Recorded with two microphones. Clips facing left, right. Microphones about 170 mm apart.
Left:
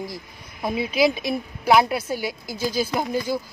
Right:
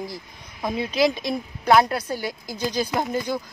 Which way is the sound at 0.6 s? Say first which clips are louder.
Left 1 dB; 5° left (ahead or behind).